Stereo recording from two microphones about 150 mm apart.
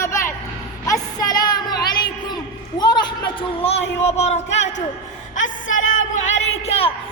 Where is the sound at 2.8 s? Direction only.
30° left (ahead or behind).